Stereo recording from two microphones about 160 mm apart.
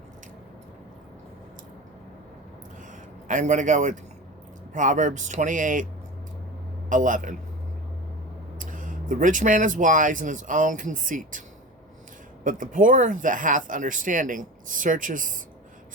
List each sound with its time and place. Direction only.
3.2 s a man's voice: 50° right (ahead or behind)
6.9 s speech: 55° right (ahead or behind)
8.5 s speech: 55° right (ahead or behind)
12.5 s speech: 55° right (ahead or behind)